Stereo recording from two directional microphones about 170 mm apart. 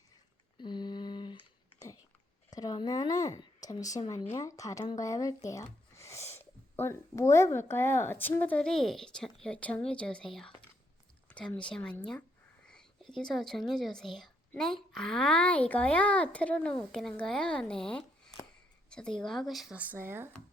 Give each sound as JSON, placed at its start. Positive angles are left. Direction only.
{"t": 0.6, "sound": "a sound", "side_deg": 25}
{"t": 2.5, "sound": "a woman's voice", "side_deg": 20}
{"t": 12.6, "sound": "whispering", "side_deg": 5}
{"t": 13.1, "sound": "a woman's voice", "side_deg": 0}